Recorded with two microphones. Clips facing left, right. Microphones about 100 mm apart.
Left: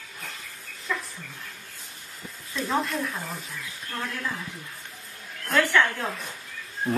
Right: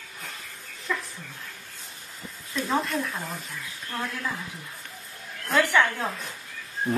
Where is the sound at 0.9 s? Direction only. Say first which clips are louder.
Even; centre (ahead or behind).